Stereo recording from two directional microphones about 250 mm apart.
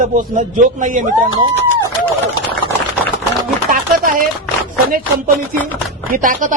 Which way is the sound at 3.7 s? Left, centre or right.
Right.